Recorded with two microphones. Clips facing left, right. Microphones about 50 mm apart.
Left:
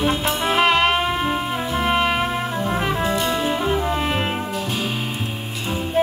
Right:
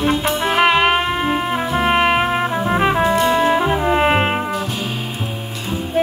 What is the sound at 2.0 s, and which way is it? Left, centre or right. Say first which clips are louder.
Music: right 5 dB; right.